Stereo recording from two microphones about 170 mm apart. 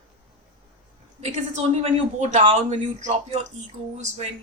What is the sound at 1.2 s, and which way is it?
A man's voice, 40° right (ahead or behind).